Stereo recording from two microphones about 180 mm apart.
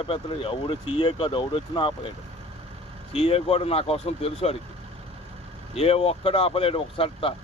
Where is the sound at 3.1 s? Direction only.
35° left (ahead or behind).